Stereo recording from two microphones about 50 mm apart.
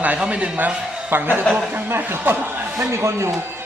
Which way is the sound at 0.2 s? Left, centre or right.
Right.